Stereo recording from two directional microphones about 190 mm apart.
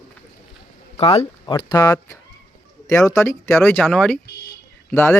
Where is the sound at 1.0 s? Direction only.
30° left (ahead or behind); by 5.1 s 10° left (ahead or behind).